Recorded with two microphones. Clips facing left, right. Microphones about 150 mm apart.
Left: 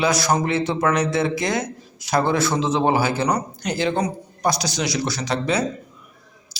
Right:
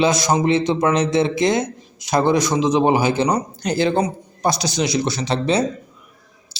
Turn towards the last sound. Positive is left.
turn(degrees=-25)  # may be behind; listen again after turning